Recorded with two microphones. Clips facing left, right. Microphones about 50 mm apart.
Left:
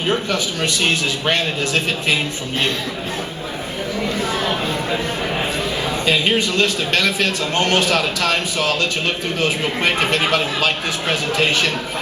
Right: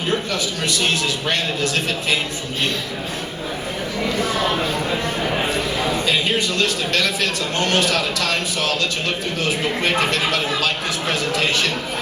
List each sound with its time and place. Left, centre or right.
0.1 s speech: left
6.1 s speech: left